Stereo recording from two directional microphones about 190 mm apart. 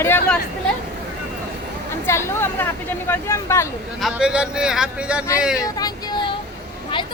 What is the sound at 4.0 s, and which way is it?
Speech, 5° right (ahead or behind).